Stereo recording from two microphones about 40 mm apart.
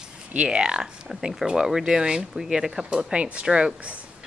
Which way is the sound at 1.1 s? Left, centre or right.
Centre.